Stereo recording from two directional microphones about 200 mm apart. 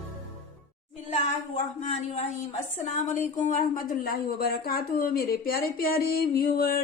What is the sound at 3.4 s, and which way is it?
Speech, 40° left (ahead or behind).